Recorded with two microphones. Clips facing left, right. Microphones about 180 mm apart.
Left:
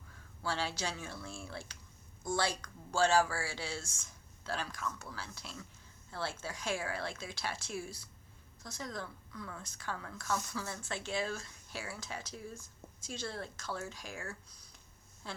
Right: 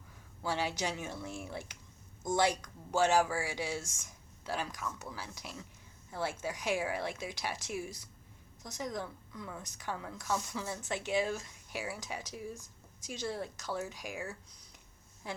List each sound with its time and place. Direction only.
0.4 s a woman's voice: 15° right (ahead or behind)